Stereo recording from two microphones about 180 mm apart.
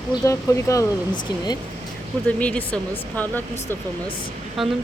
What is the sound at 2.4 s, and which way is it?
Speech, 5° left (ahead or behind).